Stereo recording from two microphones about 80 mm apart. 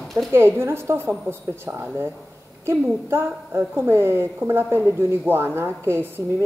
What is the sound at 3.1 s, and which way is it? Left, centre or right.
A woman's voice, right.